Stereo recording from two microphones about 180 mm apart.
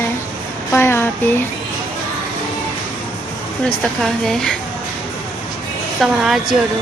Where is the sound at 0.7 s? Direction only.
15° left (ahead or behind).